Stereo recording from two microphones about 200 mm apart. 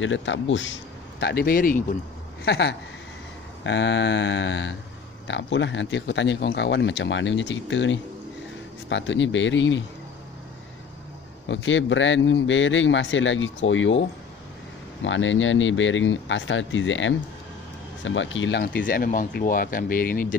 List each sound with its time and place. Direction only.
0.0 s speech: 70° left (ahead or behind)
1.2 s speech: 50° left (ahead or behind)
2.4 s speech: 55° left (ahead or behind)
11.4 s speech: 70° left (ahead or behind); by 20.3 s 45° left (ahead or behind)